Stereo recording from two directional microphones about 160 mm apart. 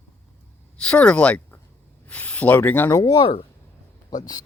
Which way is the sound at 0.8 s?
5° left (ahead or behind).